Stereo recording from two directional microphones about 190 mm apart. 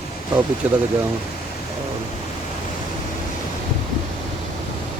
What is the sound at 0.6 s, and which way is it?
Speech, 10° right (ahead or behind).